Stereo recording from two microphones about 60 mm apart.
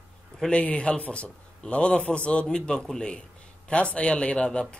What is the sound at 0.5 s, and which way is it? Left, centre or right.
A man's voice, centre.